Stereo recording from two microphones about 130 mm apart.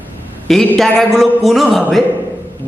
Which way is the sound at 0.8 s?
Centre (ahead or behind).